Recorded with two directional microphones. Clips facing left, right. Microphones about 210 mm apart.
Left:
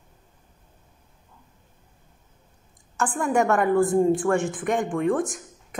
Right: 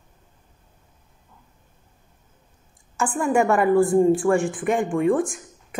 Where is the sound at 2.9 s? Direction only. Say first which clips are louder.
Right 2 dB; 10° right (ahead or behind).